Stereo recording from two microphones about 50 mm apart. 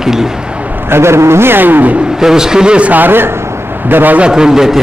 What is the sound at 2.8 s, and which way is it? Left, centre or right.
A man's voice, right.